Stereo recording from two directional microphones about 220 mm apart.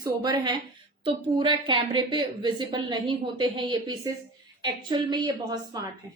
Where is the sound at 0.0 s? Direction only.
20° right (ahead or behind).